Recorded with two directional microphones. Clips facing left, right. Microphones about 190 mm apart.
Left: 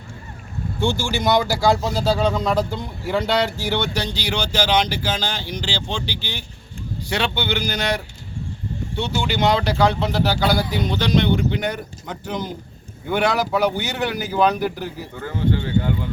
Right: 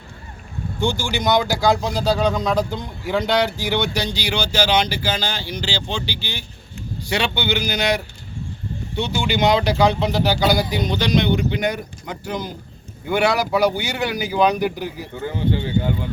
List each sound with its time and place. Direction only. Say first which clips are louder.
0.8 s speech: even; 15° right (ahead or behind)
1.2 s a man's voice: even; 5° left (ahead or behind)
3.6 s speech: right 1 dB; 15° right (ahead or behind)
15.2 s speech: even; 25° right (ahead or behind)